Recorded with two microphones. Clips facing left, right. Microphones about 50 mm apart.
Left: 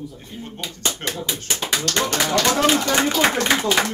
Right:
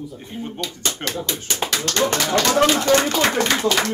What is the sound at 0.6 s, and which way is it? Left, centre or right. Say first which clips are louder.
Speech: left 1 dB; centre.